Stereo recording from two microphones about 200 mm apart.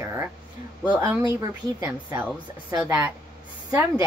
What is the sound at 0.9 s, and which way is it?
A woman's voice, 10° right (ahead or behind).